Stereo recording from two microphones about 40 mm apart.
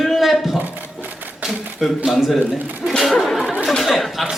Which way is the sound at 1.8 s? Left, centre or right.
Centre.